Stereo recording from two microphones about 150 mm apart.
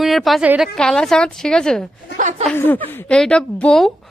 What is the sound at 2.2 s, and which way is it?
Speech, 55° right (ahead or behind).